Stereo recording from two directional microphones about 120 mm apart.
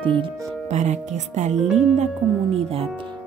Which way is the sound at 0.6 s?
75° right (ahead or behind).